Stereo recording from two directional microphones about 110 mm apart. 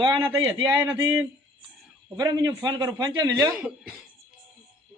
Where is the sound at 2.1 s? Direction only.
35° right (ahead or behind).